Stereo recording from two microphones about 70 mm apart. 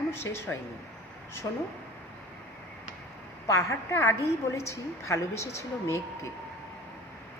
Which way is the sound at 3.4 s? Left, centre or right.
Left.